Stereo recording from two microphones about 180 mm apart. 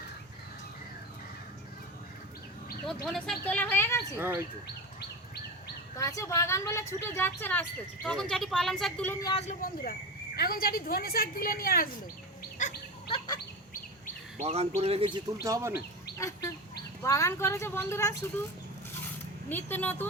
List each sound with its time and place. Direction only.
2.8 s a woman's voice: centre (ahead or behind)
4.2 s speech: 15° right (ahead or behind)
6.0 s a woman's voice: 20° left (ahead or behind)
9.5 s speech: 50° left (ahead or behind)
13.1 s fowl: 20° left (ahead or behind)
14.3 s speech: 35° right (ahead or behind)
15.4 s speech: 15° right (ahead or behind)
16.1 s fowl: 15° left (ahead or behind)
17.0 s a woman's voice: 15° left (ahead or behind)
19.5 s a woman's voice: 10° left (ahead or behind)